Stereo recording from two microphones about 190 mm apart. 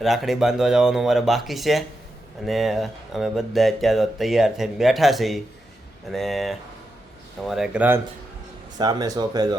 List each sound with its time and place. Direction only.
0.0 s speech: centre (ahead or behind)
8.8 s speech: 20° right (ahead or behind)